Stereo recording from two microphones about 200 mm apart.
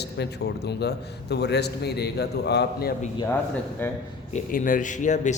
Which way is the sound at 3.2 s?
10° left (ahead or behind).